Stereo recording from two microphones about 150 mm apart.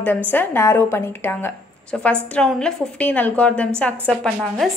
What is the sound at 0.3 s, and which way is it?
A woman's voice, 15° left (ahead or behind).